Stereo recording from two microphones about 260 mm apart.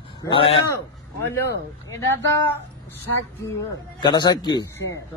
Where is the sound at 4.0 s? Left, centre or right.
Centre.